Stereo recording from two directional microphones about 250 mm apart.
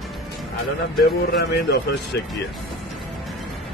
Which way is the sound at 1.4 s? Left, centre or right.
Left.